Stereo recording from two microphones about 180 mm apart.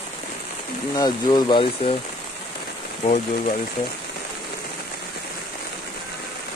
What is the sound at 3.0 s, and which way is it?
Speech, 40° left (ahead or behind).